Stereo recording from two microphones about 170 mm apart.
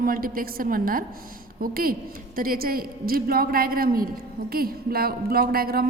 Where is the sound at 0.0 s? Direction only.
55° right (ahead or behind).